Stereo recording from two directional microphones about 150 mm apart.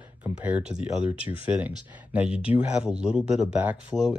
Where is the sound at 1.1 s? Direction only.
35° left (ahead or behind).